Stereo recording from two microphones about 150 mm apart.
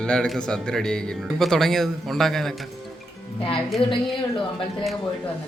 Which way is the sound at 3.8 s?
35° left (ahead or behind).